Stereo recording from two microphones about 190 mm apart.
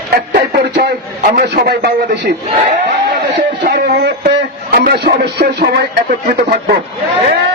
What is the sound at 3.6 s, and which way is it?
A man's voice, 55° right (ahead or behind).